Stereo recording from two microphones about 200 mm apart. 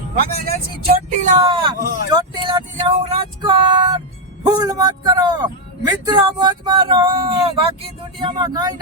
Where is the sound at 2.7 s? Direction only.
30° right (ahead or behind).